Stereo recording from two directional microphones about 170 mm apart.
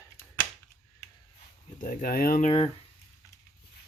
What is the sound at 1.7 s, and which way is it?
Speech, 55° left (ahead or behind).